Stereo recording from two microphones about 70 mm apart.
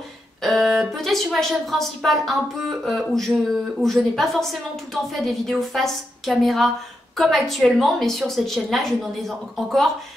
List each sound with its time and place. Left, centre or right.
0.4 s speech: centre